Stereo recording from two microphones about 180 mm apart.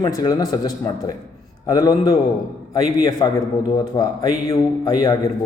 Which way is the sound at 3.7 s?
20° left (ahead or behind).